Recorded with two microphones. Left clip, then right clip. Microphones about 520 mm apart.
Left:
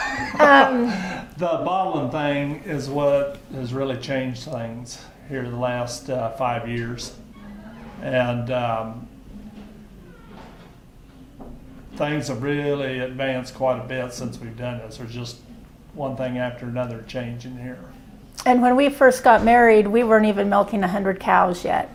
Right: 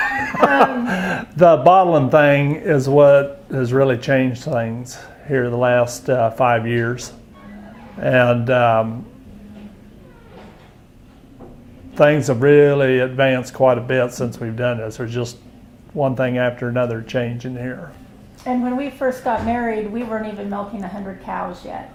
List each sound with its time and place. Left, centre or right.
0.0 s chuckle: right
0.9 s speech: right
8.0 s speech: right
11.9 s speech: right
18.4 s a woman's voice: left